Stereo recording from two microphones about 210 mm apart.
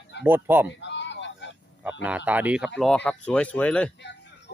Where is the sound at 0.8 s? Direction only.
60° left (ahead or behind).